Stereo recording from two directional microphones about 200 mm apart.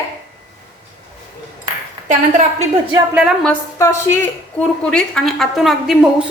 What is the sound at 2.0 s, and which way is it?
Speech, 40° right (ahead or behind).